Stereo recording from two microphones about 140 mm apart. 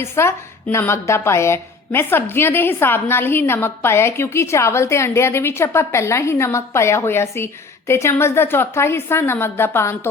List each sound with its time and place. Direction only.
0.0 s a woman's voice: 20° left (ahead or behind)